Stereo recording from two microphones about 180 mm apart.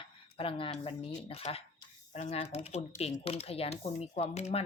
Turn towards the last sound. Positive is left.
turn(degrees=35)  # may be behind; listen again after turning